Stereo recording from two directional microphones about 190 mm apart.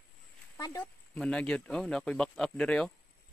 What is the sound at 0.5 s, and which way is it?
Speech, 20° left (ahead or behind).